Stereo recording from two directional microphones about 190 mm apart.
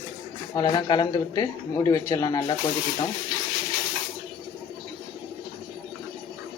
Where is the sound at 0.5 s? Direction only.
25° left (ahead or behind).